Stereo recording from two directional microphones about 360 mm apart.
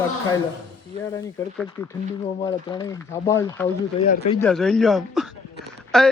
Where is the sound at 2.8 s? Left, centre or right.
Centre.